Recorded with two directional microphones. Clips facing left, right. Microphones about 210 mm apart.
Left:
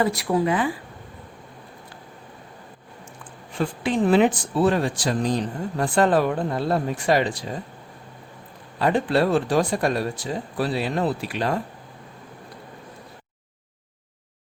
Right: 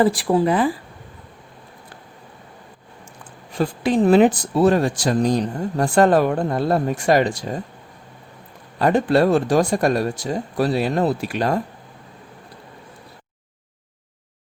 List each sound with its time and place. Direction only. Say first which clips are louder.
0.0 s speech: right 4 dB; 30° right (ahead or behind)
3.5 s speech: right 4 dB; 40° right (ahead or behind)
8.8 s speech: right 4 dB; 45° right (ahead or behind)